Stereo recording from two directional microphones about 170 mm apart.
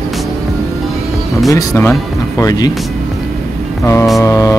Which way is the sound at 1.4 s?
15° left (ahead or behind).